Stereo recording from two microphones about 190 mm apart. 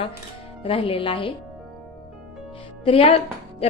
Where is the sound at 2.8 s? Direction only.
30° left (ahead or behind).